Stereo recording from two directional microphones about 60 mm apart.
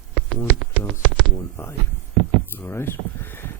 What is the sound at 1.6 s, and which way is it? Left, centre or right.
Speech, left.